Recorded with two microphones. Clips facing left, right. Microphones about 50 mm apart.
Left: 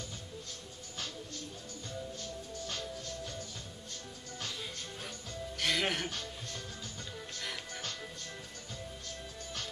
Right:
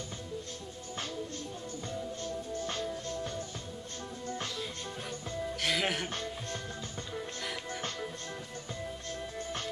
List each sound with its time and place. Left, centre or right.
2.2 s music: right
5.6 s music: centre
6.0 s music: right